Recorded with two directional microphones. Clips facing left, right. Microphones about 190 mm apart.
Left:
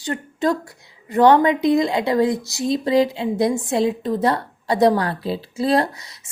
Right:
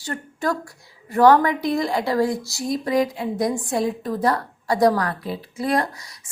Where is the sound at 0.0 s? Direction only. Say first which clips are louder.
Left 4 dB; 20° left (ahead or behind).